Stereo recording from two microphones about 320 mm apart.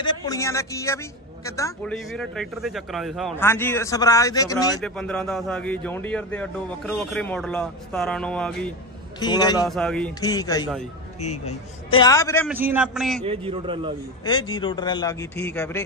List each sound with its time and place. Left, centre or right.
0.0 s a woman's voice: centre
9.2 s speech: centre
9.7 s speech: centre
11.2 s speech: left
12.0 s speech: centre
12.4 s a woman's voice: centre
13.2 s a man's voice: centre
14.2 s speech: centre